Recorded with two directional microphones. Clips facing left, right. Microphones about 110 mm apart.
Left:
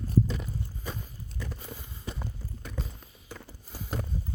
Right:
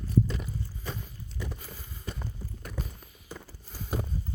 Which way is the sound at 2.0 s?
5° left (ahead or behind).